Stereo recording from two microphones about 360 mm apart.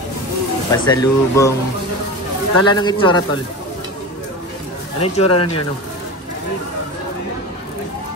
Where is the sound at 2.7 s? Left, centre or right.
Centre.